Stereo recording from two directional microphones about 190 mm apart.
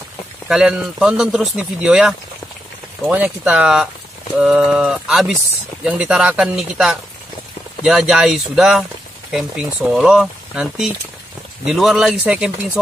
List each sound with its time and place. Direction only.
0.5 s speech: 5° right (ahead or behind)